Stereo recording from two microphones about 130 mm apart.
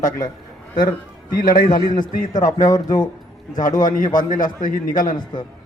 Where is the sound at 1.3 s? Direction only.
90° left.